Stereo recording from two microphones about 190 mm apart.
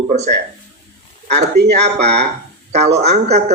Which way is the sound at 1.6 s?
60° right (ahead or behind).